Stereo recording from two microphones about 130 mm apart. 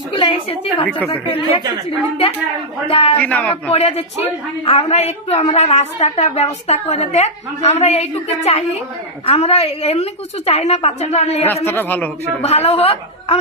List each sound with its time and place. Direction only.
0.1 s a sound: 40° left (ahead or behind)
0.9 s a man's voice: 10° left (ahead or behind)
2.8 s a woman's voice: 45° left (ahead or behind)
3.2 s a man's voice: 10° left (ahead or behind)
3.5 s a woman's voice: 50° left (ahead or behind)
11.6 s a man's voice: 15° left (ahead or behind)
12.4 s a woman's voice: 50° left (ahead or behind)